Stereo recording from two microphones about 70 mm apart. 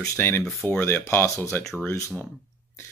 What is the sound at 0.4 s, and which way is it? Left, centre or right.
Speech, centre.